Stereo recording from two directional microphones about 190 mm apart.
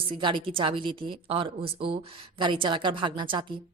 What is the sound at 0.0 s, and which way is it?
Speech, 25° right (ahead or behind).